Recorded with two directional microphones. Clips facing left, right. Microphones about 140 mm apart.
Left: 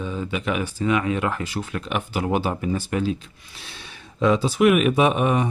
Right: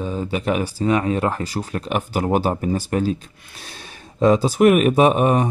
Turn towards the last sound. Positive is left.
turn(degrees=-40)  # may be behind; listen again after turning